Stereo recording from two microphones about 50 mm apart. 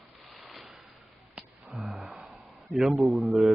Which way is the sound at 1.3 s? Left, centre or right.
Right.